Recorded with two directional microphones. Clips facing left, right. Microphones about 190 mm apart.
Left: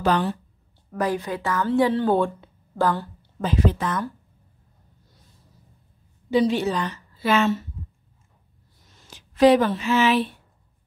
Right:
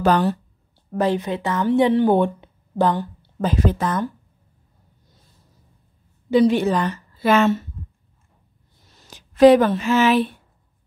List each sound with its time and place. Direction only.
0.0 s speech: 40° right (ahead or behind)
0.9 s speech: 25° right (ahead or behind)
3.2 s speech: 45° right (ahead or behind)
6.3 s a woman's voice: 55° right (ahead or behind)
8.9 s speech: 45° right (ahead or behind)